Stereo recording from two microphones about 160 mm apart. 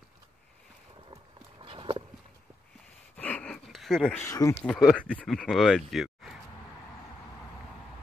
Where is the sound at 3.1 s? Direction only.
10° left (ahead or behind).